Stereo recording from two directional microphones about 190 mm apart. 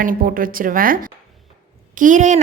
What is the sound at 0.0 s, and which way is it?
Speech, 45° right (ahead or behind).